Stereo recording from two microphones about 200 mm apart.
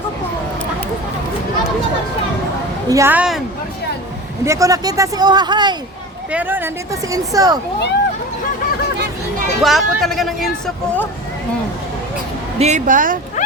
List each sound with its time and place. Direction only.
2.9 s a woman's voice: 10° right (ahead or behind)
4.4 s speech: 15° right (ahead or behind)
6.3 s a woman's voice: 10° right (ahead or behind)
9.6 s a woman's voice: centre (ahead or behind)
12.5 s a woman's voice: 35° right (ahead or behind)